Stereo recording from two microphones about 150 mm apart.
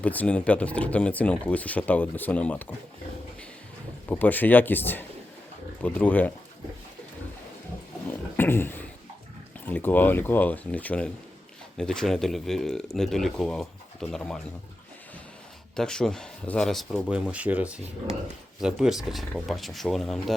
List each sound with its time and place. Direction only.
0.0 s speech: 10° left (ahead or behind)
4.1 s speech: 10° left (ahead or behind)
8.4 s a sound: 15° left (ahead or behind)
9.6 s speech: 10° left (ahead or behind)
15.7 s speech: 5° left (ahead or behind)